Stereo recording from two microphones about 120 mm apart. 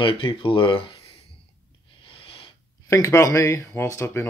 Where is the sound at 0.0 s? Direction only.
45° left (ahead or behind).